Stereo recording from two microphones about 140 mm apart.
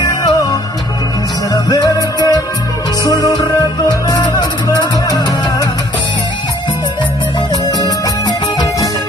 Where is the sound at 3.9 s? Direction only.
30° left (ahead or behind).